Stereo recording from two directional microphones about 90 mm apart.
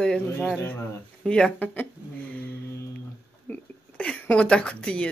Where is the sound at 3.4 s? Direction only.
15° left (ahead or behind).